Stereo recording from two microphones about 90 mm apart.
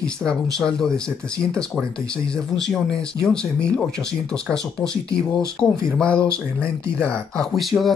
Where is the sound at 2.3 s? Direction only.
5° left (ahead or behind).